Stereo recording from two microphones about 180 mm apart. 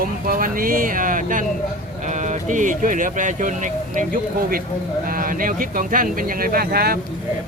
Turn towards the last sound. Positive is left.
turn(degrees=-60)  # may be behind; listen again after turning